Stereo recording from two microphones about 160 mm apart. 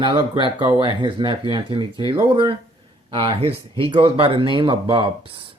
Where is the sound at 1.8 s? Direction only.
25° left (ahead or behind).